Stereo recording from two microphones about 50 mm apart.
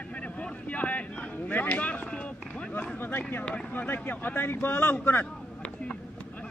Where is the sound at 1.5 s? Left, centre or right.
Left.